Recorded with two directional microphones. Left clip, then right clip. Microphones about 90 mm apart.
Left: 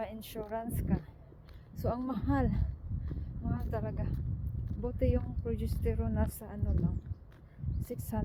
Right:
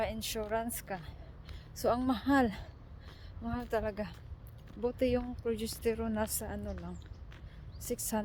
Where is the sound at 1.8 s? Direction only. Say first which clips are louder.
Right 5 dB; 65° right (ahead or behind); by 6.3 s 40° right (ahead or behind).